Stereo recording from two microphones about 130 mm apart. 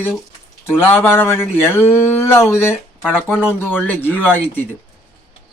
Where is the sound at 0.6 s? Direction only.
15° left (ahead or behind).